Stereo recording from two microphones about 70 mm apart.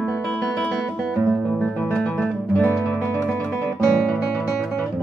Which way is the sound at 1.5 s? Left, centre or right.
Left.